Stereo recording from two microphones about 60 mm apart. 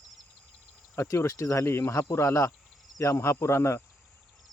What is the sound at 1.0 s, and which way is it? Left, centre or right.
Speech, left.